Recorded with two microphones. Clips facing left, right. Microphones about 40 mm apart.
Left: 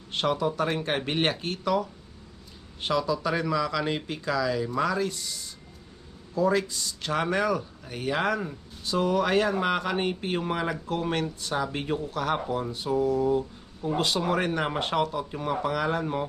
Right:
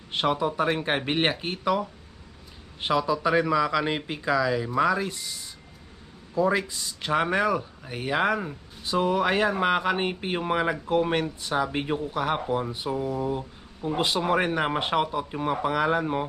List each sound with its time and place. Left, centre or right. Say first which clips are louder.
0.1 s speech: right 1 dB; centre